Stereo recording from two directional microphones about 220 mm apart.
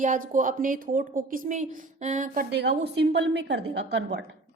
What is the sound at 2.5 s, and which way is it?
A woman's voice, 50° right (ahead or behind).